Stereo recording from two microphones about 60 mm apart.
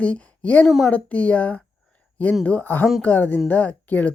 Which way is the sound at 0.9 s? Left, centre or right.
Left.